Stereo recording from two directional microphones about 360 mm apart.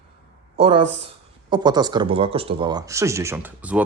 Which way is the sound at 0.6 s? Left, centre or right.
Centre.